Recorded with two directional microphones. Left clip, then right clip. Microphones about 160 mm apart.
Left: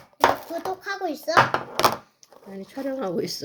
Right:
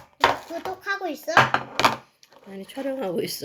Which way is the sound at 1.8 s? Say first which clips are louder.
Even; 90° left.